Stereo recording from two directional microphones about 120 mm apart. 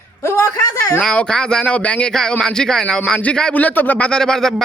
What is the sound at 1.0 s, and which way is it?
Speech, 5° left (ahead or behind).